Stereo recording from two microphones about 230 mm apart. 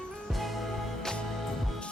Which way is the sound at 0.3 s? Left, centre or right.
Centre.